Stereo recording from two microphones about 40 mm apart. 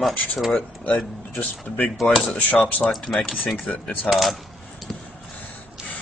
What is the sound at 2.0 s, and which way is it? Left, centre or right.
Speech, centre.